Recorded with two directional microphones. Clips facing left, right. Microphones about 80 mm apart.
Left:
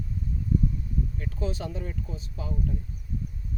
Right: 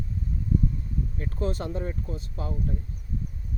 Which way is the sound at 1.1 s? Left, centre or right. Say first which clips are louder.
Right 3 dB; right.